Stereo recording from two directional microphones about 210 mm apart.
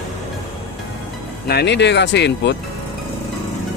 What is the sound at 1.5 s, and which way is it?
Speech, 55° left (ahead or behind).